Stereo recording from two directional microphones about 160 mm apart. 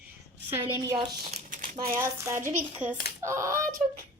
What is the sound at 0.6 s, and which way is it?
Speech, 25° right (ahead or behind).